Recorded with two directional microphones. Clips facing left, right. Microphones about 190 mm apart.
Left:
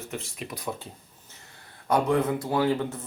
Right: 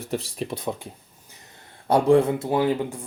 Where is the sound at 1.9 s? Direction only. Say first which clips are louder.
Right 6 dB; 30° right (ahead or behind).